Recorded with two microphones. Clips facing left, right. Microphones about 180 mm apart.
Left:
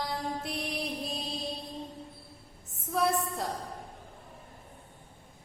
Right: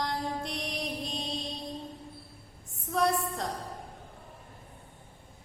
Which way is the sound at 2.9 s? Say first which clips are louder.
Right 1 dB; 5° left (ahead or behind).